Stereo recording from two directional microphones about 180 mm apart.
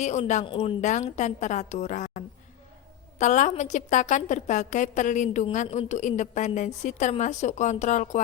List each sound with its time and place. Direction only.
0.0 s a woman's voice: 40° left (ahead or behind)
0.4 s a woman's voice: 30° left (ahead or behind)
0.8 s a woman's voice: 40° left (ahead or behind)